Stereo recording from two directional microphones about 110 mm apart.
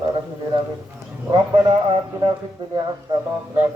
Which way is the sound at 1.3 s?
40° right (ahead or behind).